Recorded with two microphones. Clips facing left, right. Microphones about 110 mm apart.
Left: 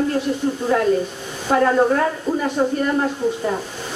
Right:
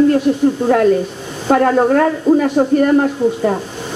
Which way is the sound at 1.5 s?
50° right (ahead or behind).